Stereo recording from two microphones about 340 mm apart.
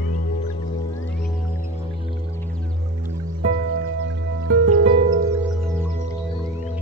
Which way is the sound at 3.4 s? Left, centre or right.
Right.